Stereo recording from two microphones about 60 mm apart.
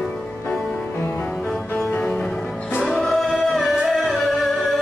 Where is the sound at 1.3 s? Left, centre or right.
Centre.